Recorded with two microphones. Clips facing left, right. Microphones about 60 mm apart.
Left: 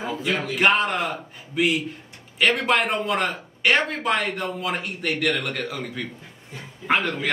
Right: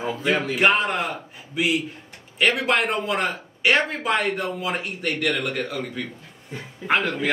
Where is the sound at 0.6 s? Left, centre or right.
Centre.